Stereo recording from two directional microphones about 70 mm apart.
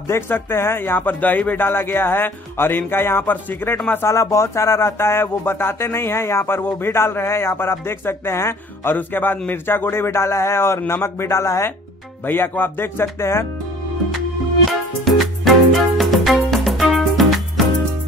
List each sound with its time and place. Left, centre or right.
0.1 s speech: left
4.1 s speech: left
8.9 s speech: left
12.3 s speech: left
14.7 s music: centre